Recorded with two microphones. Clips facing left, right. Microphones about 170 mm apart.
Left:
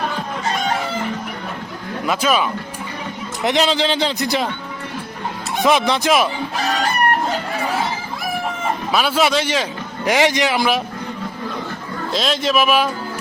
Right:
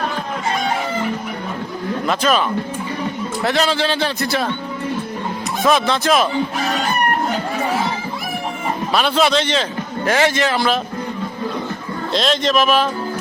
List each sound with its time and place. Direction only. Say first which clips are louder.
2.0 s a man's voice: even; 10° left (ahead or behind)
3.4 s a man's voice: left 1 dB; 20° left (ahead or behind)
5.6 s a man's voice: even; 15° left (ahead or behind)
8.9 s a man's voice: right 1 dB; 5° left (ahead or behind)
12.1 s a man's voice: right 2 dB; 5° left (ahead or behind)